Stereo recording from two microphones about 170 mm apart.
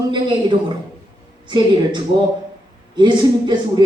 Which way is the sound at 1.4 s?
25° right (ahead or behind).